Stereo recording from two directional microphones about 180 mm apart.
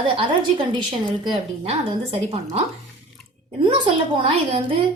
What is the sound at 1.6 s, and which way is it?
A woman's voice, 35° right (ahead or behind).